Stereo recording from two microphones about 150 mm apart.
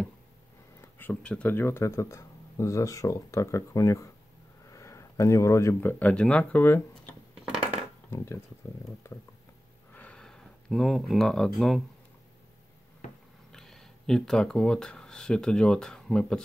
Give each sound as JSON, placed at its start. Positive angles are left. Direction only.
{"t": 0.7, "sound": "speech", "side_deg": 15}
{"t": 9.0, "sound": "speech", "side_deg": 15}
{"t": 9.9, "sound": "a sound", "side_deg": 5}
{"t": 13.5, "sound": "speech", "side_deg": 5}